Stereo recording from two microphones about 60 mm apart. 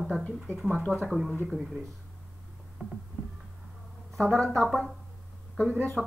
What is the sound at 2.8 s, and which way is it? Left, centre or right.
Speech, centre.